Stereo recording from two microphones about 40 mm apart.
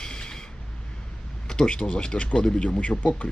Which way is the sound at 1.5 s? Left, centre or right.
Centre.